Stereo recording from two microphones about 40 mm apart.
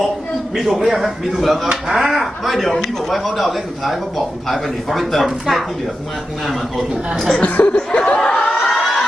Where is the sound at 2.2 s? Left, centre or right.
Centre.